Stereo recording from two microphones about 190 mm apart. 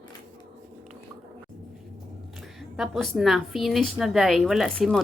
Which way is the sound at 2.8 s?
Centre (ahead or behind).